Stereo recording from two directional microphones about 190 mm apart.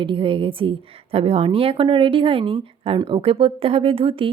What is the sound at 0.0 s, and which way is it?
A woman's voice, 25° right (ahead or behind).